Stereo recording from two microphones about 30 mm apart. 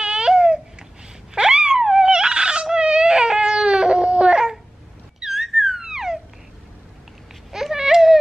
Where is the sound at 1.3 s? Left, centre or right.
Right.